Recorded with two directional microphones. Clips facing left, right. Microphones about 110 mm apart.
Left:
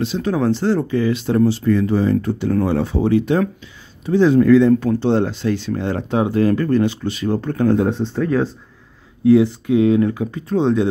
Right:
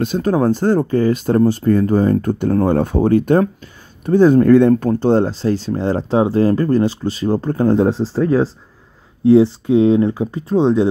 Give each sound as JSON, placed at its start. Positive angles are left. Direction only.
{"t": 0.0, "sound": "speech", "side_deg": -45}